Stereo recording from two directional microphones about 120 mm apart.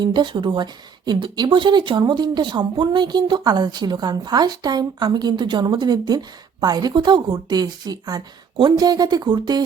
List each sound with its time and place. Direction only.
0.0 s speech: 40° right (ahead or behind)